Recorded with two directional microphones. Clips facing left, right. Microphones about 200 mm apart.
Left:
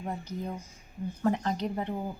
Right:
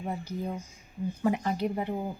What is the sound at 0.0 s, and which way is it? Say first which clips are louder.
Speech: right 2 dB; 10° right (ahead or behind).